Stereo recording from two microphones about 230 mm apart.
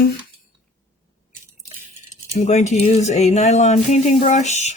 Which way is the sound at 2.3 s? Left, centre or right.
Left.